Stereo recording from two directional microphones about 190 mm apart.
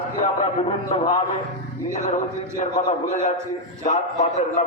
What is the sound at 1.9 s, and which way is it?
Speech, 40° left (ahead or behind).